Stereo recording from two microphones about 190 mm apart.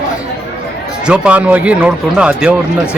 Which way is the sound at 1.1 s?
5° right (ahead or behind).